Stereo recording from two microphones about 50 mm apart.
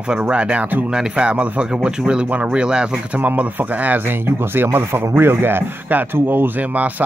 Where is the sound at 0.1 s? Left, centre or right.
Centre.